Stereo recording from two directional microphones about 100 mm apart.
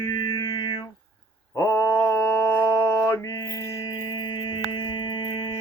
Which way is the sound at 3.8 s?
45° left (ahead or behind).